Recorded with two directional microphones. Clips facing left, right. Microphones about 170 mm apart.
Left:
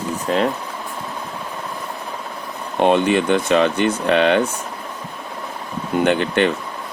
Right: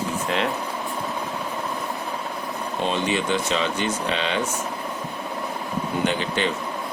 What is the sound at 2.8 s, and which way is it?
Speech, 60° left (ahead or behind).